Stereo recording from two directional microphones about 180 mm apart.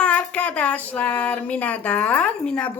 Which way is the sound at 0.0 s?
5° left (ahead or behind).